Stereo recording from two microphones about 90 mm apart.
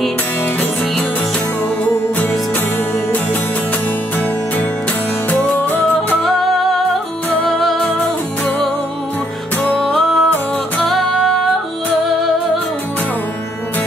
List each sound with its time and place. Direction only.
5.3 s music: 20° left (ahead or behind)
7.4 s music: centre (ahead or behind)
9.7 s music: 10° left (ahead or behind)